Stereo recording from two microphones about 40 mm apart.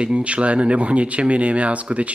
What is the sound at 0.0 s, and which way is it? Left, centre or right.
Speech, right.